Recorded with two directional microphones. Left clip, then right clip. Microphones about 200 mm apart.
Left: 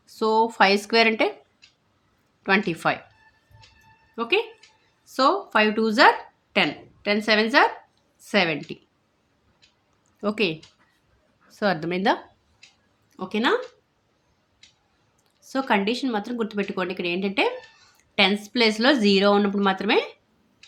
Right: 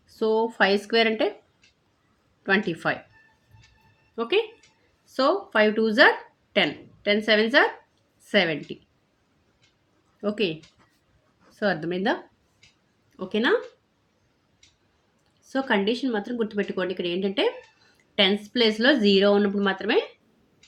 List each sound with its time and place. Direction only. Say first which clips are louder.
0.1 s speech: left 3 dB; 20° left (ahead or behind)
2.4 s speech: left 2 dB; 20° left (ahead or behind)
4.1 s speech: left 1 dB; 15° left (ahead or behind)
10.2 s a woman's voice: left 2 dB; 20° left (ahead or behind)
13.1 s speech: left 1 dB; 15° left (ahead or behind)
15.4 s a woman's voice: left 1 dB; 15° left (ahead or behind)